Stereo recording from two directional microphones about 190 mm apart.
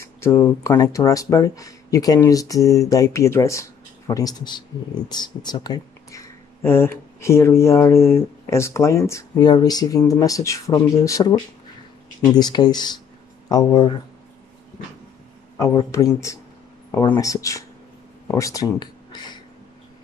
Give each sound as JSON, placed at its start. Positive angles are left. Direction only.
{"t": 0.0, "sound": "speech", "side_deg": 15}
{"t": 15.5, "sound": "speech", "side_deg": 15}